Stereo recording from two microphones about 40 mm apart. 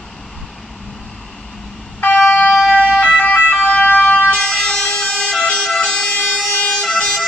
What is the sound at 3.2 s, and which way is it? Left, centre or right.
Emergency vehicle, left.